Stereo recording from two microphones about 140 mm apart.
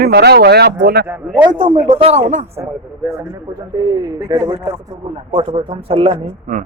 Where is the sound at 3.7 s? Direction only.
30° right (ahead or behind).